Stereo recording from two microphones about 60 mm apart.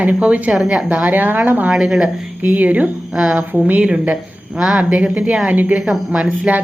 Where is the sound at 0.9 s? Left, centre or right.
Right.